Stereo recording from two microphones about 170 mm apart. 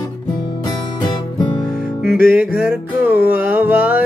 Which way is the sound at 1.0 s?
25° left (ahead or behind).